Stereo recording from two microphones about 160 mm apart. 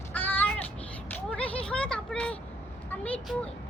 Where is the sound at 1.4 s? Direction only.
5° left (ahead or behind).